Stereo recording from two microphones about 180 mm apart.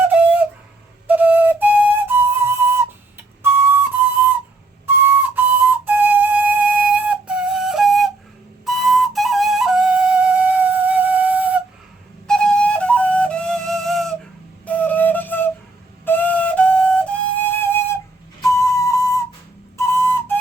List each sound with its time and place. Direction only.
0.0 s flute: 10° right (ahead or behind)
5.0 s flute: 10° right (ahead or behind)
12.3 s flute: 5° left (ahead or behind)